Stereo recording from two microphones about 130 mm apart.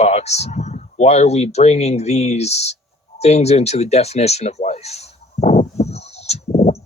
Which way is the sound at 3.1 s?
55° left (ahead or behind).